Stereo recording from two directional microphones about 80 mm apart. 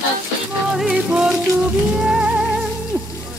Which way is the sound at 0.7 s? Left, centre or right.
Centre.